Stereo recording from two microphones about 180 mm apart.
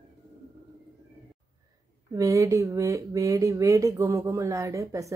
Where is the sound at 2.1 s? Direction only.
15° right (ahead or behind).